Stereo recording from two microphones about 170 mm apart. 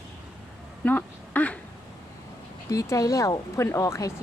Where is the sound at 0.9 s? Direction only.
10° left (ahead or behind).